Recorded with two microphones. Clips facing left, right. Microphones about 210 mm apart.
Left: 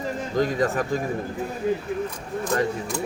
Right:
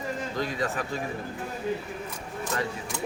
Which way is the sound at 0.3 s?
45° left (ahead or behind).